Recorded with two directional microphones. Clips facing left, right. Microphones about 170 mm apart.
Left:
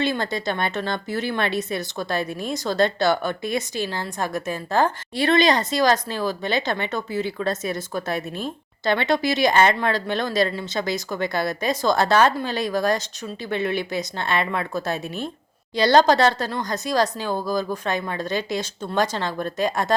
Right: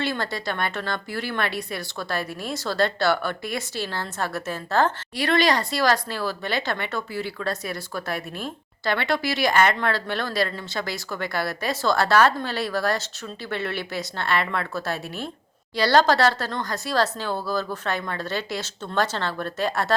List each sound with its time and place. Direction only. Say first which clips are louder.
0.0 s speech: left 3 dB; 20° left (ahead or behind)